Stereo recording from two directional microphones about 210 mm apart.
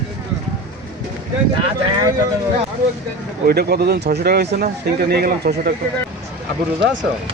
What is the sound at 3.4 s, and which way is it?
Speech, 50° right (ahead or behind).